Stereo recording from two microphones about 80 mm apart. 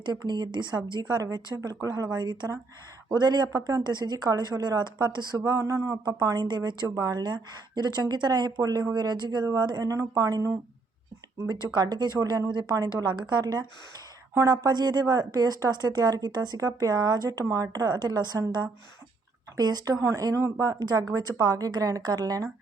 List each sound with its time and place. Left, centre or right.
0.0 s a woman's voice: right
1.2 s speech: right
3.2 s a woman's voice: right
3.5 s speech: right
3.8 s a woman's voice: right
5.5 s speech: right
6.8 s a woman's voice: right
11.7 s a woman's voice: right
19.5 s speech: right
20.6 s speech: right